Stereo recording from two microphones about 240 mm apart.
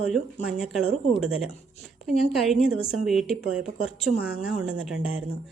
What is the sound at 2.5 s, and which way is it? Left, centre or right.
Speech, centre.